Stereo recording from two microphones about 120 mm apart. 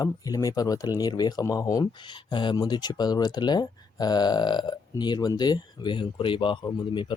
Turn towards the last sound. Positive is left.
turn(degrees=40)  # may be behind; listen again after turning